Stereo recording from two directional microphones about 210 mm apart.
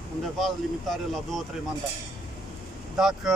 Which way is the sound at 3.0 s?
Centre (ahead or behind).